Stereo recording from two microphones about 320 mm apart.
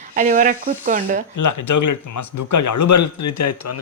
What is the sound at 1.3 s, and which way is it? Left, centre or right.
Speech, left.